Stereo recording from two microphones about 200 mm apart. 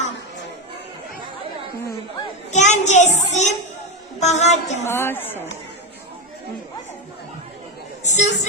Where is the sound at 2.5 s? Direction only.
35° left (ahead or behind).